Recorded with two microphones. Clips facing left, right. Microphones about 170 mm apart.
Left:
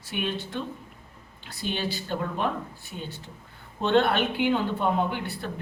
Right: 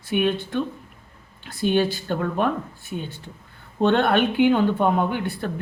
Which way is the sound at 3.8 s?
55° right (ahead or behind).